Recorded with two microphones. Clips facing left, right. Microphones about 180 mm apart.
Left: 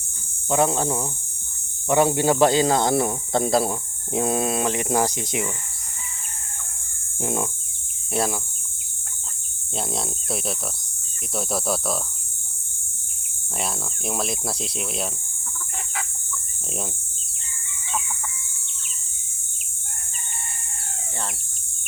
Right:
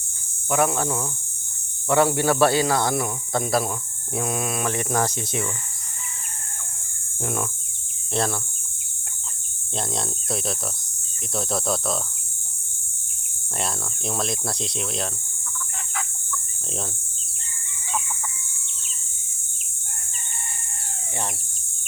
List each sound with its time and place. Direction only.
0.5 s speech: 25° left (ahead or behind)
4.7 s speech: 15° left (ahead or behind)
7.2 s speech: 20° left (ahead or behind)
8.1 s speech: 10° left (ahead or behind)
9.7 s speech: 5° left (ahead or behind)
13.6 s speech: 5° left (ahead or behind)